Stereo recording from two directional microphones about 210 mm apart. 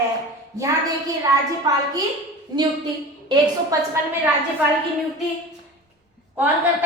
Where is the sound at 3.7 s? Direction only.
15° right (ahead or behind).